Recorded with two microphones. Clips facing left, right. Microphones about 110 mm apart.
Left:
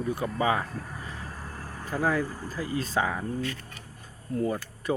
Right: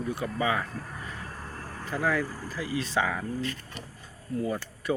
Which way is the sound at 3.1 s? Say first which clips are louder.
Left 1 dB; 25° left (ahead or behind).